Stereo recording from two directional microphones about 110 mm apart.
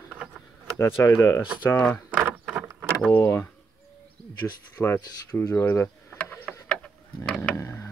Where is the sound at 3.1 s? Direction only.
25° left (ahead or behind).